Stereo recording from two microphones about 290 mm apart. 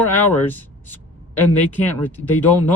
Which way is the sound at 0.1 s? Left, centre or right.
Centre.